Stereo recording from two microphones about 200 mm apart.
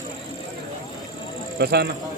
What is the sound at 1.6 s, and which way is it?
Speech, 55° right (ahead or behind).